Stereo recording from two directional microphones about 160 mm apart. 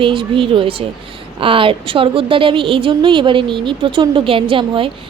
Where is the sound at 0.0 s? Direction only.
35° right (ahead or behind).